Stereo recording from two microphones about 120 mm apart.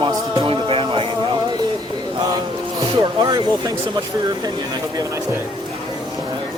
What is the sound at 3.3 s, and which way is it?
Speech, 35° right (ahead or behind).